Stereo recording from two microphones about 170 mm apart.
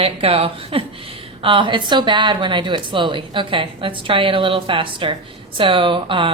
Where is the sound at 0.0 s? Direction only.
35° right (ahead or behind).